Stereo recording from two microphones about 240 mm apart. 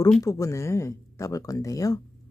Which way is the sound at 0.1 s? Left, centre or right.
Centre.